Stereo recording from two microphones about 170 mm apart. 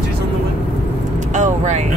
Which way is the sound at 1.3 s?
45° right (ahead or behind).